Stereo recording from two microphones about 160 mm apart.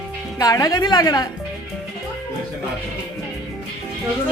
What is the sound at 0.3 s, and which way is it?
Music, 20° left (ahead or behind).